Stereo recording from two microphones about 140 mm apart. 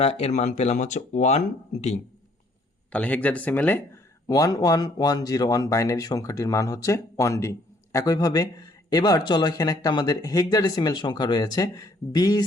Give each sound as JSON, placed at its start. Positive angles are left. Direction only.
{"t": 0.0, "sound": "speech", "side_deg": 45}
{"t": 2.9, "sound": "speech", "side_deg": 10}